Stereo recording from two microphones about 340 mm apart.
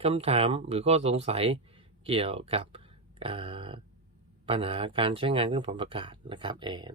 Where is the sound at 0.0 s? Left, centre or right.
Centre.